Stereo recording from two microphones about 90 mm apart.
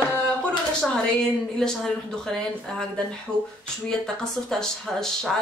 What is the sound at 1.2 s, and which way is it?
Speech, 5° left (ahead or behind).